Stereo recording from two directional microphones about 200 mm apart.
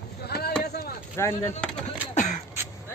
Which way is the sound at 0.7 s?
50° left (ahead or behind).